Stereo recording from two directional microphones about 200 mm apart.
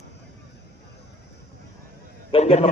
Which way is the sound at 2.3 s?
30° left (ahead or behind).